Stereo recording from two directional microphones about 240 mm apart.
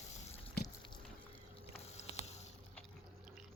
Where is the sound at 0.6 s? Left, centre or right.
Left.